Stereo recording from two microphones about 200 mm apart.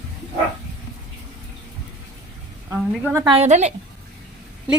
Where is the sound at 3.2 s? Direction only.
30° right (ahead or behind).